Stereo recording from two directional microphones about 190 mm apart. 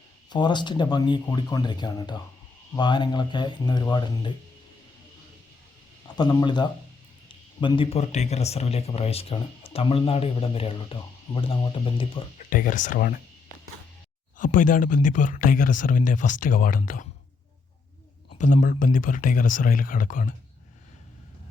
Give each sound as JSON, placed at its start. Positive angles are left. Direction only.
{"t": 0.3, "sound": "speech", "side_deg": 25}
{"t": 6.1, "sound": "speech", "side_deg": 20}
{"t": 12.5, "sound": "speech", "side_deg": 45}
{"t": 14.3, "sound": "speech", "side_deg": 45}
{"t": 18.3, "sound": "speech", "side_deg": 40}